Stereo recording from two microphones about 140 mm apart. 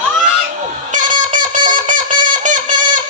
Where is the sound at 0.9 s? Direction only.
65° right (ahead or behind).